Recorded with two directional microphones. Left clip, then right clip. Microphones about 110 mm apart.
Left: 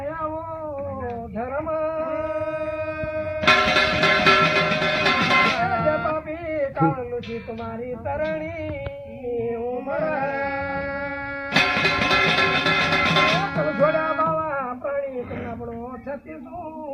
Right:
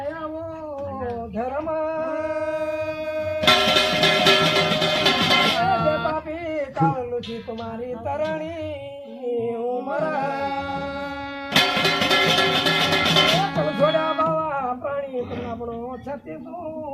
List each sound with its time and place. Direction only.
2.5 s music: 50° right (ahead or behind)
3.4 s music: 20° right (ahead or behind)
5.6 s music: 45° right (ahead or behind)
6.6 s a sound: 25° right (ahead or behind)
8.0 s singing: 25° right (ahead or behind)
9.9 s music: 35° right (ahead or behind)
11.5 s music: 10° right (ahead or behind)
13.6 s music: 30° right (ahead or behind)